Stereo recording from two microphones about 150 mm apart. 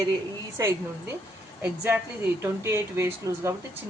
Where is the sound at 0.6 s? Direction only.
20° right (ahead or behind).